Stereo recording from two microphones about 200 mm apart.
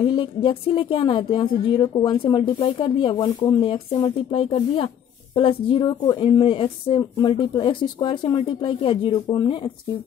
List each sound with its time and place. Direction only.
0.0 s a woman's voice: 25° left (ahead or behind)